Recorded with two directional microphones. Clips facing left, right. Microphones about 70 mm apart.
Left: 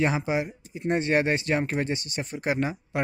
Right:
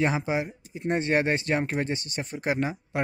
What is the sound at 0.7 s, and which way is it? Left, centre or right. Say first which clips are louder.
Speech: left 1 dB; right.